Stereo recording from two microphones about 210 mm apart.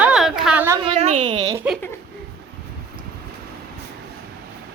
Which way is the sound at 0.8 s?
30° right (ahead or behind).